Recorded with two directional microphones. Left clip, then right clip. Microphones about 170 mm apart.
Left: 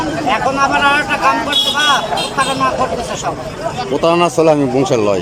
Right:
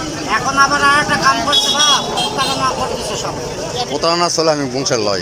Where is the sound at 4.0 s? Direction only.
20° left (ahead or behind).